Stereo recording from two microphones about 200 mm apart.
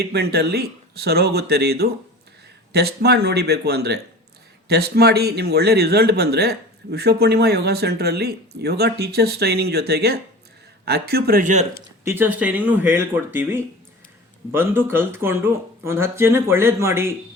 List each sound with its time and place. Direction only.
0.0 s a man's voice: 55° right (ahead or behind)
12.0 s speech: 10° right (ahead or behind)